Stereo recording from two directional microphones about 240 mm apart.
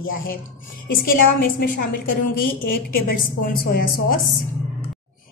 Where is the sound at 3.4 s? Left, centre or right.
Left.